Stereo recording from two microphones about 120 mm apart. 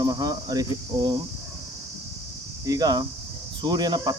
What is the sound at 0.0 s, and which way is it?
Speech, 30° right (ahead or behind).